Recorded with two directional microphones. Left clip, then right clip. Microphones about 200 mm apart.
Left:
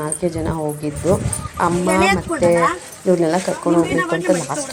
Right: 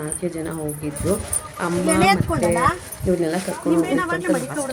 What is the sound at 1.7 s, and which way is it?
Speech, 55° right (ahead or behind).